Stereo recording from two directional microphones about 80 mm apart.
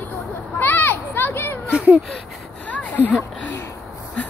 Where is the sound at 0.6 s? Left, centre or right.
Left.